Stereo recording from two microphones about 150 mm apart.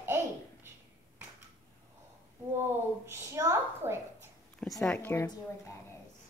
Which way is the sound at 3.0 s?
20° right (ahead or behind).